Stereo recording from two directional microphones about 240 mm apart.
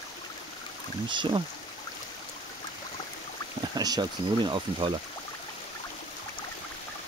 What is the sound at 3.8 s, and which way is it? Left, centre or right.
Speech, centre.